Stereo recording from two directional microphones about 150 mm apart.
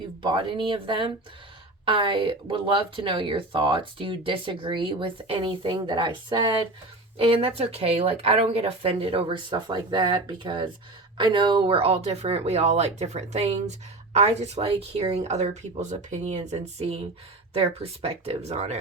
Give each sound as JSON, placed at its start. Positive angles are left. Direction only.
{"t": 0.2, "sound": "speech", "side_deg": -35}